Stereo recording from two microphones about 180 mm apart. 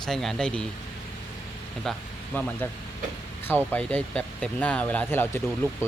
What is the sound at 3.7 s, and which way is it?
Speech, 10° left (ahead or behind).